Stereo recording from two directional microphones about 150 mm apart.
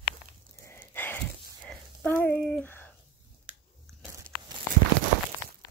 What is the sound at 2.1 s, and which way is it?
Speech, 15° left (ahead or behind).